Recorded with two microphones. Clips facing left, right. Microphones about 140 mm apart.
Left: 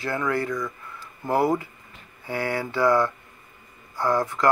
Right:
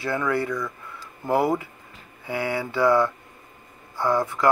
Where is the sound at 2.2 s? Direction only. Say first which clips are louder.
Right 1 dB; 15° right (ahead or behind).